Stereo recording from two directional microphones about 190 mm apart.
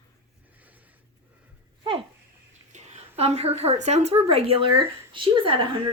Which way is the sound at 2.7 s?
35° right (ahead or behind).